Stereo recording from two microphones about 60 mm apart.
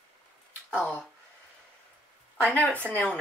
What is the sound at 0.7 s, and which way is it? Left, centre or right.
Speech, left.